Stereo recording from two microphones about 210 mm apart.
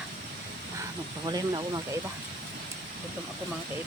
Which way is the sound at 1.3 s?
20° right (ahead or behind).